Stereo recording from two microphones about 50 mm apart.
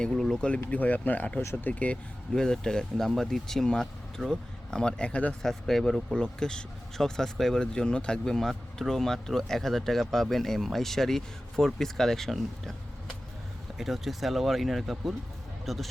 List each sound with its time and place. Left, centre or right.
0.1 s speech: centre
0.7 s speech: left
2.3 s speech: centre
5.4 s speech: centre
13.7 s speech: centre